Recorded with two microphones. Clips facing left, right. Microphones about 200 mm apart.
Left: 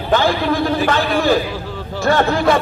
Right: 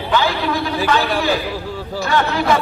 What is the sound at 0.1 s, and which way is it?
A man's voice, 50° left (ahead or behind).